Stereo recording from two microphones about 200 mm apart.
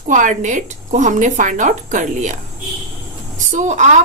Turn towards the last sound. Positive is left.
turn(degrees=-35)  # may be behind; listen again after turning